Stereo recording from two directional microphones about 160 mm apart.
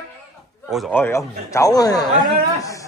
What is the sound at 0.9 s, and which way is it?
Speech, 15° left (ahead or behind).